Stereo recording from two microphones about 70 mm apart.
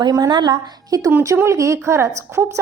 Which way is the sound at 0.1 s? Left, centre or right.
Right.